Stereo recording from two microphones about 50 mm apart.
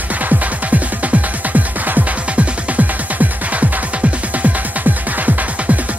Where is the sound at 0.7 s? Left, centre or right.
Right.